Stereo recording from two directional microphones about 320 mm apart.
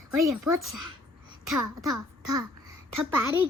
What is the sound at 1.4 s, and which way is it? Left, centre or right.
A child's voice, centre.